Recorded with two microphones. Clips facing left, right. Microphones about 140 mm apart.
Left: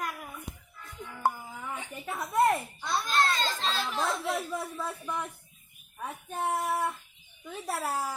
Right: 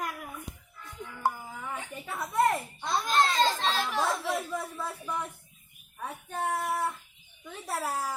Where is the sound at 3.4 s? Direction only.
10° right (ahead or behind).